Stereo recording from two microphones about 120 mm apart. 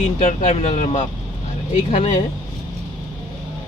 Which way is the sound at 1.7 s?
85° left.